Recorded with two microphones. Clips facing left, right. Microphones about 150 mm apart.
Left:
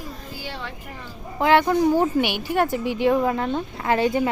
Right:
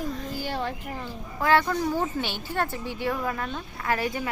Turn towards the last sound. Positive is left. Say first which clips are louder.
# left 7 dB
turn(degrees=25)  # may be behind; listen again after turning